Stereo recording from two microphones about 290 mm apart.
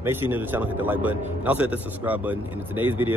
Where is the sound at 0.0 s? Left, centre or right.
Centre.